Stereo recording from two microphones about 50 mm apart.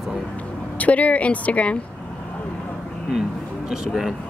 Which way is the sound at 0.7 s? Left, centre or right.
Left.